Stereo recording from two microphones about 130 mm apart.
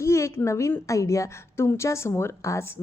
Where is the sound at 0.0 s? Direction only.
20° left (ahead or behind).